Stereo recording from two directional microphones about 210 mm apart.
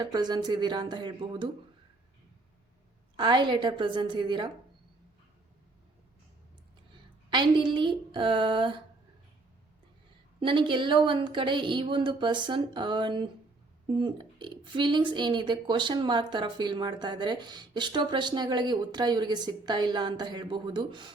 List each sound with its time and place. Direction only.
0.0 s speech: 20° right (ahead or behind)
3.2 s speech: 20° right (ahead or behind)
7.3 s speech: 20° right (ahead or behind)
10.4 s speech: 25° right (ahead or behind)